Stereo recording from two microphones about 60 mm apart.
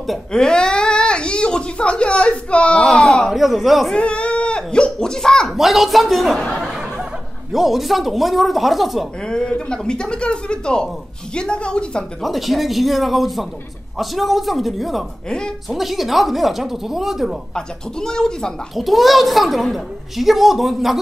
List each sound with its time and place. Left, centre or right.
0.3 s a sound: centre
2.8 s a woman's voice: centre
3.9 s a child's voice: centre
5.5 s a woman's voice: centre
6.6 s laughter: centre
7.5 s a woman's voice: centre
9.2 s speech: centre
12.2 s a woman's voice: centre
15.2 s speech: centre
15.7 s a woman's voice: centre
17.6 s speech: centre
18.8 s a woman's voice: centre